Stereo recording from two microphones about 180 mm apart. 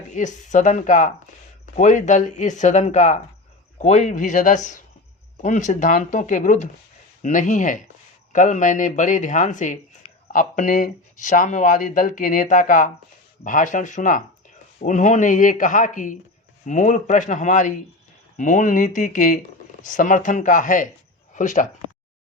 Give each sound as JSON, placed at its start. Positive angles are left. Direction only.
{"t": 0.1, "sound": "speech", "side_deg": 40}